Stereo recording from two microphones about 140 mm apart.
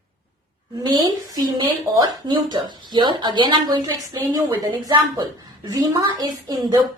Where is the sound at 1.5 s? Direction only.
35° right (ahead or behind).